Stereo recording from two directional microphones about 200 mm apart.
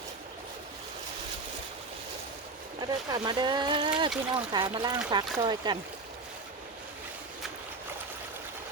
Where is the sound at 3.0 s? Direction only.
20° right (ahead or behind).